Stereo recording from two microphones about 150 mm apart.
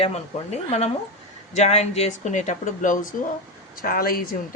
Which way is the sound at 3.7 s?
70° left (ahead or behind).